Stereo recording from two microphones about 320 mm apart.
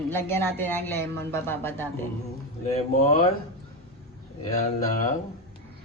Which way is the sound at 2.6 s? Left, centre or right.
Centre.